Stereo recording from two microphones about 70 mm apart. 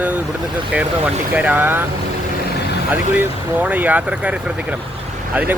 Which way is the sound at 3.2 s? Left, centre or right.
Right.